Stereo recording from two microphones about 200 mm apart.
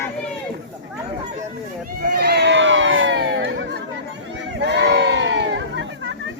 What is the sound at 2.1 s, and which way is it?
Crowd, 55° right (ahead or behind).